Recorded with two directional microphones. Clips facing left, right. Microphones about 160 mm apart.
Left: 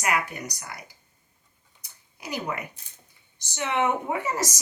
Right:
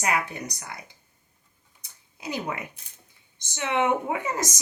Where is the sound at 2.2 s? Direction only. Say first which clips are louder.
Even; 25° right (ahead or behind).